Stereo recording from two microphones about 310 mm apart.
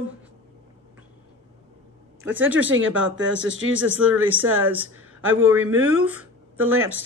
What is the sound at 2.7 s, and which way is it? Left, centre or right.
A man's voice, right.